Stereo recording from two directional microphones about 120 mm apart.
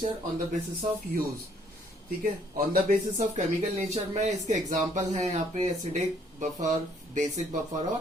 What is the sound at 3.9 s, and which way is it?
Speech, 70° right (ahead or behind).